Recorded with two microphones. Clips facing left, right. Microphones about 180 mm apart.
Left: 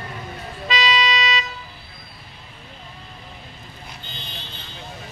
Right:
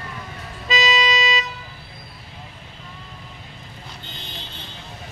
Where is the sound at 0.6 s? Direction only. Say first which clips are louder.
Right 1 dB; 45° right (ahead or behind).